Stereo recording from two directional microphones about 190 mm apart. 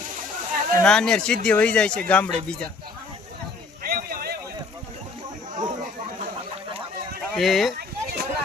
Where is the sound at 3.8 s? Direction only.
50° right (ahead or behind).